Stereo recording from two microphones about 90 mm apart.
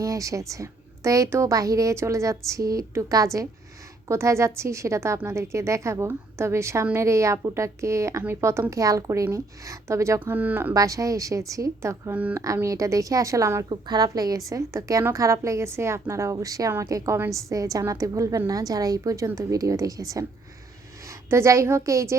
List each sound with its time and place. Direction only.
0.0 s a woman's voice: 40° right (ahead or behind)
10.3 s speech: 20° right (ahead or behind)
10.8 s a woman's voice: 40° right (ahead or behind)
12.1 s speech: 20° right (ahead or behind)
12.6 s a woman's voice: 35° right (ahead or behind)
13.7 s a woman's voice: 50° right (ahead or behind)
21.2 s a woman's voice: 30° right (ahead or behind)